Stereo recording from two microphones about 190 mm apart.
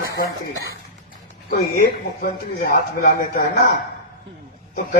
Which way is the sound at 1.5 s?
50° left (ahead or behind).